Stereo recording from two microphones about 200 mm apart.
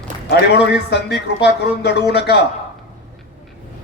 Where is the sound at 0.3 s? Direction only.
55° left (ahead or behind).